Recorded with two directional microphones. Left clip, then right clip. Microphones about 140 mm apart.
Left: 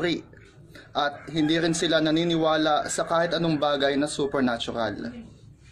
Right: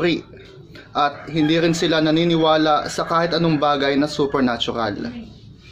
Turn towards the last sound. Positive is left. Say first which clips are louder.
# right 6 dB
turn(degrees=15)  # may be behind; listen again after turning